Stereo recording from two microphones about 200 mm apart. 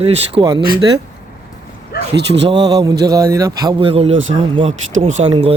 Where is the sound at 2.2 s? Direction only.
60° right (ahead or behind).